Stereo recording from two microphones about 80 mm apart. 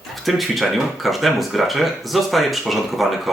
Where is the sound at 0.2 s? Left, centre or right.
Centre.